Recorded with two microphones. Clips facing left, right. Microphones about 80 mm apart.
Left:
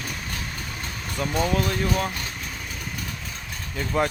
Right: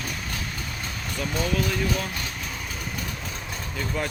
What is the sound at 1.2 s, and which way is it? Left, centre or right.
Speech, left.